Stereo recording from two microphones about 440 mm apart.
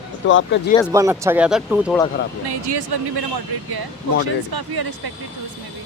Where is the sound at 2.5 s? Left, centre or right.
Right.